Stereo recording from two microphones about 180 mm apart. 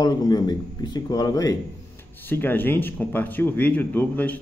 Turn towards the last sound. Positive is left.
turn(degrees=10)  # may be behind; listen again after turning